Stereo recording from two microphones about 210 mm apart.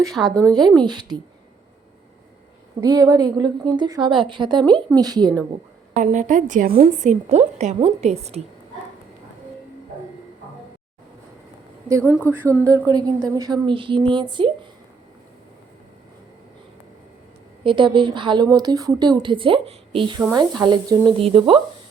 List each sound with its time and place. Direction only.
0.1 s speech: centre (ahead or behind)
0.8 s a woman's voice: 20° right (ahead or behind)
2.8 s a woman's voice: 15° right (ahead or behind)
6.0 s a woman's voice: 35° right (ahead or behind)
11.9 s a woman's voice: 15° right (ahead or behind)
17.6 s a woman's voice: 25° right (ahead or behind)